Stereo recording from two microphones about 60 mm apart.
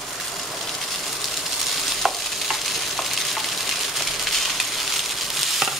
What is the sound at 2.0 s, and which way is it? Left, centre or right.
Stir, centre.